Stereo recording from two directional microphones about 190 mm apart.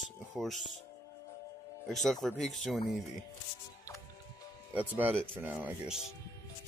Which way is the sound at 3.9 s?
15° left (ahead or behind).